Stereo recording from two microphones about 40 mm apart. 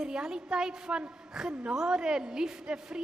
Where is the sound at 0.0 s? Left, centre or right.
Centre.